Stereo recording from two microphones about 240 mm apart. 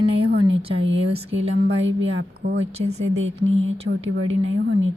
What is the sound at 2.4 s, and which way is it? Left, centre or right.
Speech, right.